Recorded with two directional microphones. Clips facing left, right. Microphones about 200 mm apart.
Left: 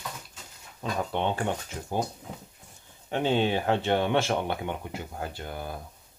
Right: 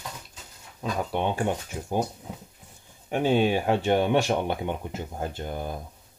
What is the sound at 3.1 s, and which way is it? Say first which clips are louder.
Speech: right 3 dB; 10° right (ahead or behind).